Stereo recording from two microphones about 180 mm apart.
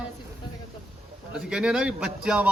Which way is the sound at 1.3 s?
5° right (ahead or behind).